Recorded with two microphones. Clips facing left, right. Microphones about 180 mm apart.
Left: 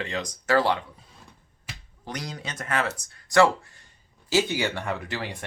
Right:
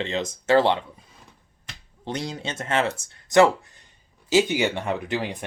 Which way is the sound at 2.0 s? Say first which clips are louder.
Right 5 dB; 25° right (ahead or behind).